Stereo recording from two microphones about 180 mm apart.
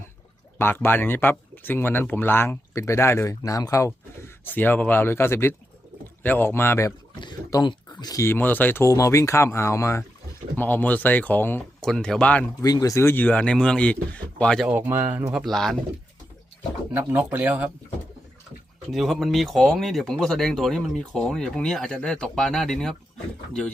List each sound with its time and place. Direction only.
0.6 s speech: 10° left (ahead or behind)
12.6 s speech: 20° left (ahead or behind); by 14.7 s 5° left (ahead or behind)
14.7 s speech: 10° right (ahead or behind)
16.9 s speech: 10° right (ahead or behind)
18.9 s speech: centre (ahead or behind)